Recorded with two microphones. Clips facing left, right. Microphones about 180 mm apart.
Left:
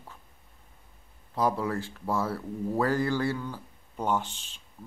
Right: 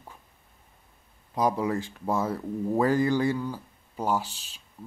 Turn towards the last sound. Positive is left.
turn(degrees=-10)  # may be behind; listen again after turning